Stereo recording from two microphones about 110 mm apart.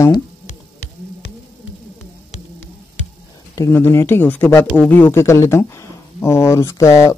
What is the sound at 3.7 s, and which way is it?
Speech, 20° left (ahead or behind).